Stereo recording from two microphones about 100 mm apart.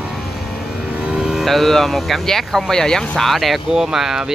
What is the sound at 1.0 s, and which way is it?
Speech, 5° right (ahead or behind).